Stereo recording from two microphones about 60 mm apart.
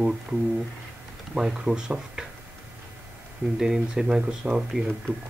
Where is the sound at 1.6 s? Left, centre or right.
Centre.